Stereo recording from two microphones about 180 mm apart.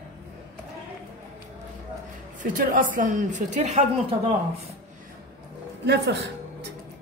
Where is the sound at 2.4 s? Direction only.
50° right (ahead or behind).